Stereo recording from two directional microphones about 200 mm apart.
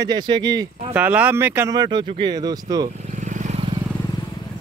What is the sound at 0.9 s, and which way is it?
Speech, 5° right (ahead or behind).